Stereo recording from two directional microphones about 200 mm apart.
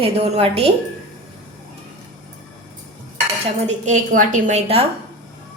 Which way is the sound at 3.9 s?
40° right (ahead or behind).